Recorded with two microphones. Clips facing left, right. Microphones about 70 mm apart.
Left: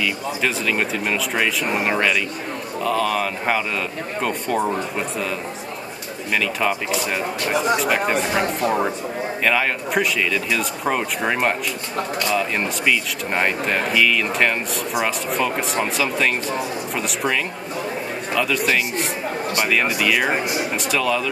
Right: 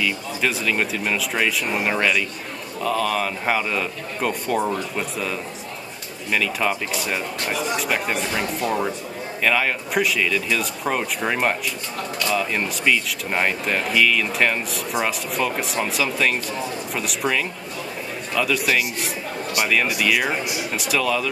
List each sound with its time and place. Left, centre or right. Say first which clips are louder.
0.0 s speech: left 1 dB; centre
6.3 s speech: left 1 dB; centre
7.5 s speech: left 6 dB; left
8.2 s speech: left 4 dB; left
9.4 s speech: even; centre
20.2 s speech: left 3 dB; left
20.7 s speech: right 1 dB; centre